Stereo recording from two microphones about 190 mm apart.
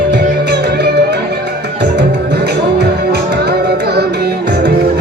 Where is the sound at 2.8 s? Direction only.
60° right (ahead or behind).